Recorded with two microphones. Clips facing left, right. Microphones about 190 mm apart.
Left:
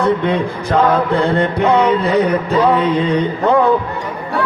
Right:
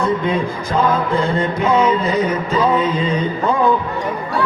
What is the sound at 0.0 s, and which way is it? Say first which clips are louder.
Mantra: left 3 dB; 65° left (ahead or behind).